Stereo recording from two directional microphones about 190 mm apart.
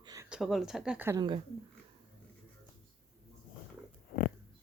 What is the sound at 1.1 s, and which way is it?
Speech, 25° right (ahead or behind).